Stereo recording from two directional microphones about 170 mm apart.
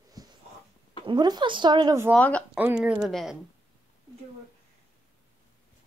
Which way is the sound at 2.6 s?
10° right (ahead or behind).